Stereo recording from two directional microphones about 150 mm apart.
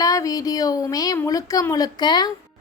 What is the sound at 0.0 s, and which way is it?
A woman's voice, 25° left (ahead or behind).